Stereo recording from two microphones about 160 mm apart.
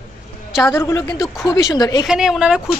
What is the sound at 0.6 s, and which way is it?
A woman's voice, 15° left (ahead or behind).